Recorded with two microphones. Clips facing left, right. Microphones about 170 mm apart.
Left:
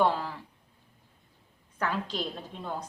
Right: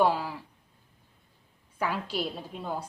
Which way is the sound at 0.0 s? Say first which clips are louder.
Right 1 dB; 10° right (ahead or behind).